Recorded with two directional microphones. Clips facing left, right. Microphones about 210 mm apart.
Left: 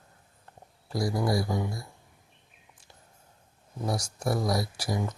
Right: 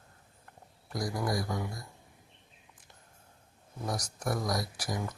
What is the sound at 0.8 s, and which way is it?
Speech, 30° left (ahead or behind).